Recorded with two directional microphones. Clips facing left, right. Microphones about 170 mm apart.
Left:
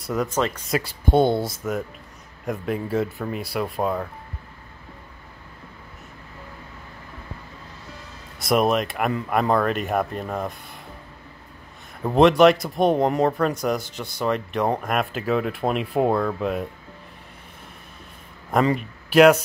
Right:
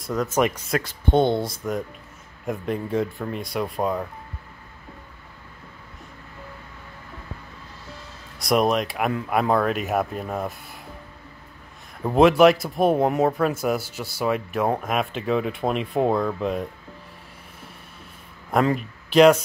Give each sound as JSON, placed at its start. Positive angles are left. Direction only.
{"t": 0.0, "sound": "speech", "side_deg": 5}
{"t": 0.3, "sound": "speech", "side_deg": -15}
{"t": 0.7, "sound": "speech", "side_deg": 5}
{"t": 8.4, "sound": "speech", "side_deg": 0}
{"t": 12.0, "sound": "speech", "side_deg": 0}
{"t": 18.5, "sound": "speech", "side_deg": 0}